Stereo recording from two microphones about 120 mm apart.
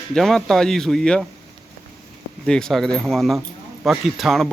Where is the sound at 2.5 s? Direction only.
5° left (ahead or behind).